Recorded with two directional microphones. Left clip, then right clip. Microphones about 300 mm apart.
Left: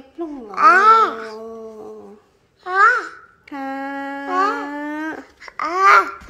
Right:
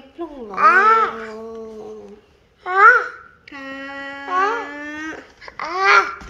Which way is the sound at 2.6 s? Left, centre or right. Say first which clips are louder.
Right 3 dB; centre.